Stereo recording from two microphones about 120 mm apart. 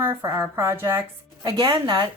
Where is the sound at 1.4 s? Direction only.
35° right (ahead or behind).